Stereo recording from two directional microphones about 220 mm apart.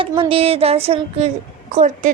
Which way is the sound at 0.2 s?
25° right (ahead or behind).